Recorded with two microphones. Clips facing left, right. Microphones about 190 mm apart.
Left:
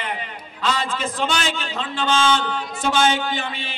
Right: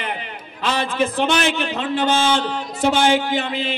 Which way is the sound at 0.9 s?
60° right (ahead or behind).